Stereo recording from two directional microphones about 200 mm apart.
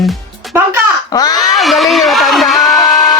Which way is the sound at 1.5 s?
Centre (ahead or behind).